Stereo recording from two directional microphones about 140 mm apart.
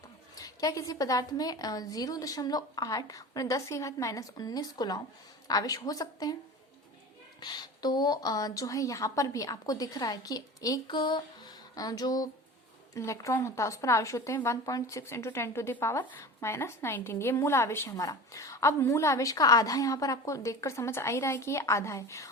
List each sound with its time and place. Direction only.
0.3 s a woman's voice: 25° left (ahead or behind)
7.3 s a woman's voice: 30° left (ahead or behind)